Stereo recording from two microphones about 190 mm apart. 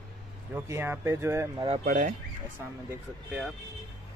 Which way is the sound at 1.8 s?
40° right (ahead or behind).